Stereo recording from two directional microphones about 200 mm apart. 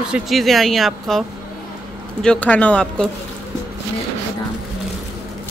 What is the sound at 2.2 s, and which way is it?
Speech, 5° left (ahead or behind).